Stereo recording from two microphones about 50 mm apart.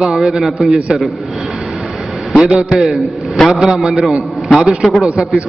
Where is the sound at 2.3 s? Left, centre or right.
Centre.